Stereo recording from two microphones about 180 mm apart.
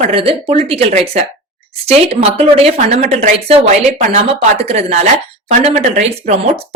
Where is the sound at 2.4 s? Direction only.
35° right (ahead or behind).